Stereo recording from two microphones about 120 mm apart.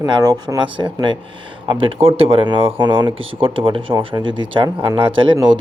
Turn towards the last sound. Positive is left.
turn(degrees=-35)  # may be behind; listen again after turning